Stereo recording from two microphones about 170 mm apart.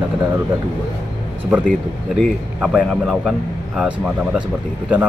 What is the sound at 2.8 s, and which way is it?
A man's voice, centre (ahead or behind).